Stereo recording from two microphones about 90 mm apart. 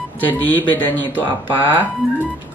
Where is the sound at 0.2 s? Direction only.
20° left (ahead or behind).